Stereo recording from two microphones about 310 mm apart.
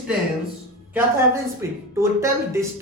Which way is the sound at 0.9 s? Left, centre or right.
Centre.